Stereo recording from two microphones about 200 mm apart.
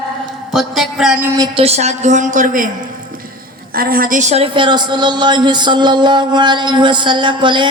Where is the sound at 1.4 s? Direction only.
30° right (ahead or behind).